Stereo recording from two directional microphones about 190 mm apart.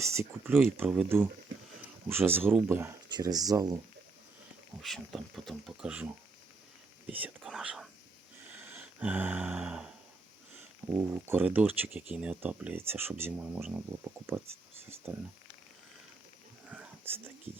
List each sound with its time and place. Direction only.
0.0 s speech: 15° right (ahead or behind)
3.1 s speech: 20° right (ahead or behind)
4.8 s speech: centre (ahead or behind)
7.1 s speech: 5° right (ahead or behind)
8.5 s a sound: 10° right (ahead or behind)
10.5 s speech: 10° right (ahead or behind)
16.6 s whispering: 5° right (ahead or behind)
17.5 s speech: 30° right (ahead or behind)